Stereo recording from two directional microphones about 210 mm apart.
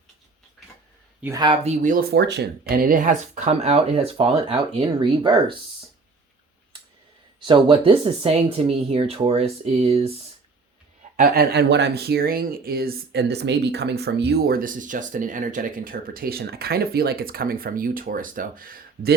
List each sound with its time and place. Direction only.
1.2 s speech: 20° right (ahead or behind)
7.3 s speech: 25° right (ahead or behind)
11.2 s speech: 50° right (ahead or behind)